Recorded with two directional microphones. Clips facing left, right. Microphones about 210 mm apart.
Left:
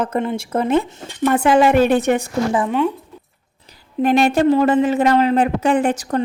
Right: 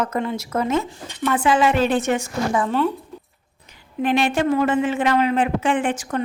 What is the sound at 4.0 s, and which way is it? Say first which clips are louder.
Speech: left 5 dB; 40° left (ahead or behind).